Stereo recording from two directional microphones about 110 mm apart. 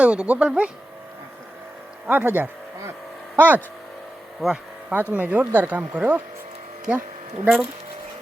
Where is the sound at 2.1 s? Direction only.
20° right (ahead or behind).